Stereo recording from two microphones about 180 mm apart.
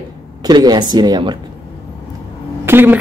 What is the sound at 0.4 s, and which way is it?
Speech, 25° right (ahead or behind).